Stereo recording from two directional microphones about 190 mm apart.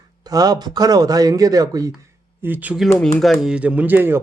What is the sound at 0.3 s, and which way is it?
Speech, 20° right (ahead or behind).